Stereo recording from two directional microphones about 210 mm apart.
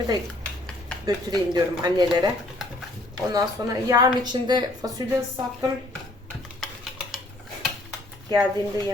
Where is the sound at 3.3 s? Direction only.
15° right (ahead or behind).